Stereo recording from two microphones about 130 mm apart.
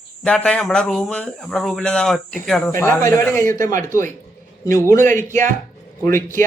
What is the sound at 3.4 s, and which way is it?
Speech, 90° right.